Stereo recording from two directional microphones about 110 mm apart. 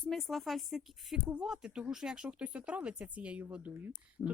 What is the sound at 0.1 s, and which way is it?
Speech, centre (ahead or behind).